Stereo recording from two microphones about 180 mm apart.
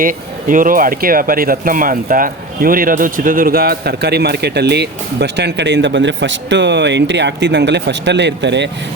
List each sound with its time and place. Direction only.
0.0 s speech: 50° right (ahead or behind); by 8.7 s 75° right (ahead or behind)